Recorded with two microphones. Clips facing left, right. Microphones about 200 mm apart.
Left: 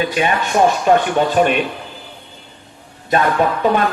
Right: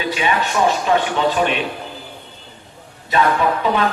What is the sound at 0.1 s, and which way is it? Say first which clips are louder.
Speech: left 2 dB; 50° left (ahead or behind).